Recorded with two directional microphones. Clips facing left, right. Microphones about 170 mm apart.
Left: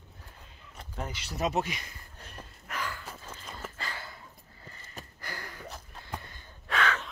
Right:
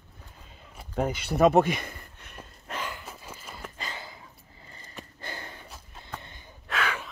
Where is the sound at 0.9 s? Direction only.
55° right (ahead or behind).